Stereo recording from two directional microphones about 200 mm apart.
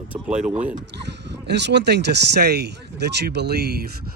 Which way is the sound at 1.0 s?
60° right (ahead or behind).